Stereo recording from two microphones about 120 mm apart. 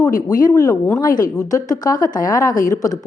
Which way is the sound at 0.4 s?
30° left (ahead or behind).